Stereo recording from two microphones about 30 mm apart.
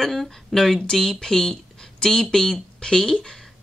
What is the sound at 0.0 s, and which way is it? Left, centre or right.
A woman's voice, centre.